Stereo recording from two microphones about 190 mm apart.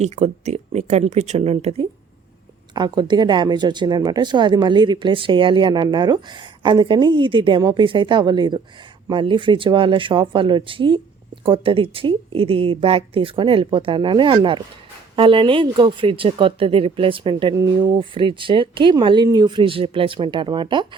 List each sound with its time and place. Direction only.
0.0 s speech: 35° right (ahead or behind)
2.7 s a woman's voice: 20° right (ahead or behind)